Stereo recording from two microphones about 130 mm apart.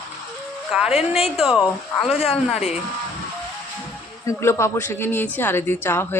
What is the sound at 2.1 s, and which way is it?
Speech, 50° left (ahead or behind).